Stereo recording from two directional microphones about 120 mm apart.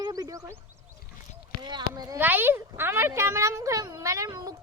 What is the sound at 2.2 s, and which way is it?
Speech, 15° right (ahead or behind).